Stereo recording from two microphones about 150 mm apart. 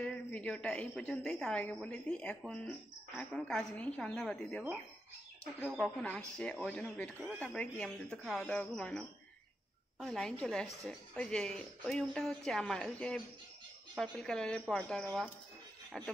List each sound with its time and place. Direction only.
0.0 s a woman's voice: 10° left (ahead or behind)
6.0 s a woman's voice: 10° left (ahead or behind)